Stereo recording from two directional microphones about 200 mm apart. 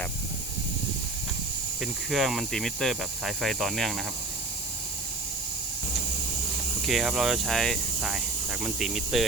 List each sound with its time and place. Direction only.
1.8 s speech: centre (ahead or behind)
6.8 s speech: centre (ahead or behind)